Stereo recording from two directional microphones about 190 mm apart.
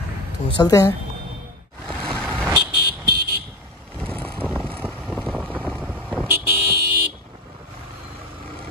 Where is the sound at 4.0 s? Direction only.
5° left (ahead or behind).